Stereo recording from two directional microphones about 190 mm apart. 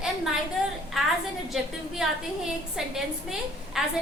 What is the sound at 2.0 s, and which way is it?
A woman's voice, centre (ahead or behind).